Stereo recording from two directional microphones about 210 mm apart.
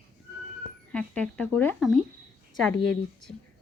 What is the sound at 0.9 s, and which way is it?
A woman's voice, 5° left (ahead or behind).